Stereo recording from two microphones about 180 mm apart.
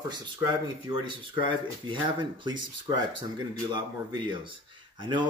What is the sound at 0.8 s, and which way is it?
Speech, 25° right (ahead or behind).